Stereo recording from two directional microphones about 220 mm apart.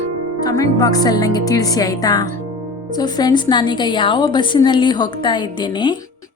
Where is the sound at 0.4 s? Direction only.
15° left (ahead or behind).